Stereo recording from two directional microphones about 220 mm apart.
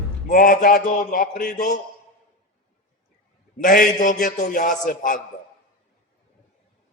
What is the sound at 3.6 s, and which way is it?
A man's voice, 40° left (ahead or behind).